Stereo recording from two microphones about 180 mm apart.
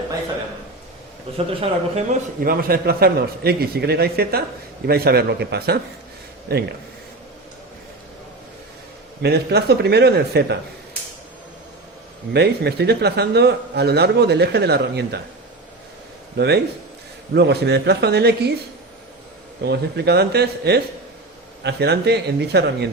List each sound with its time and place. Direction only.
1.4 s speech: 30° right (ahead or behind)
2.4 s a man's voice: 55° right (ahead or behind)
9.2 s a man's voice: 65° right (ahead or behind)
12.3 s a man's voice: 65° right (ahead or behind)
16.4 s speech: 75° right (ahead or behind)
19.6 s a man's voice: 65° right (ahead or behind)